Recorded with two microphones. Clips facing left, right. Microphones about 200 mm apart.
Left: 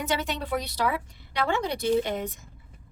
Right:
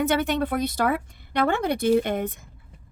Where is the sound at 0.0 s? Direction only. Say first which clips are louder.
Right 7 dB; 55° right (ahead or behind).